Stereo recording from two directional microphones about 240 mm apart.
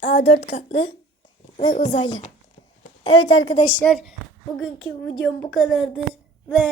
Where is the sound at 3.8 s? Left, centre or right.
Centre.